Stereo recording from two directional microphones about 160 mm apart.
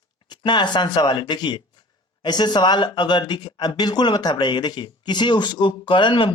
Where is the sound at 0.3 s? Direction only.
30° left (ahead or behind).